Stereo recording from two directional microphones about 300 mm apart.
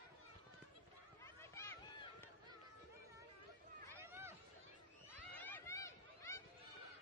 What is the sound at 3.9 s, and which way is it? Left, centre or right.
Run, centre.